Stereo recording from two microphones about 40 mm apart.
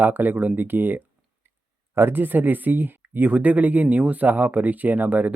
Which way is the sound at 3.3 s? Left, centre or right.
Right.